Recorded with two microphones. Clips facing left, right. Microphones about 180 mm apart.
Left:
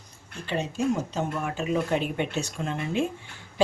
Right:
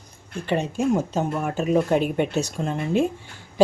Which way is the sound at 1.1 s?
45° right (ahead or behind).